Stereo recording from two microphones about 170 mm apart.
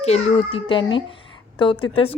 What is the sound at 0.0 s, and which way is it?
A woman's voice, 40° left (ahead or behind).